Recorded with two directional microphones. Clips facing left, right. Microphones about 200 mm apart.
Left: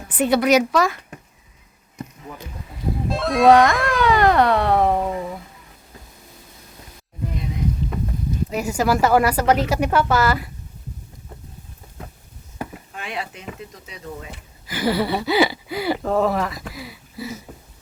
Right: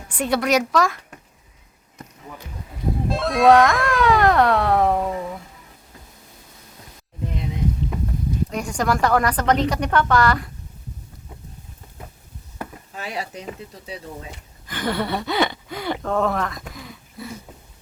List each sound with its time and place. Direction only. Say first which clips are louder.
0.1 s speech: left 4 dB; 5° left (ahead or behind)
3.1 s speech: left 1 dB; centre (ahead or behind)
8.4 s speech: left 4 dB; 5° left (ahead or behind)
13.0 s speech: right 1 dB; 40° right (ahead or behind)
14.7 s speech: left 3 dB; 5° left (ahead or behind)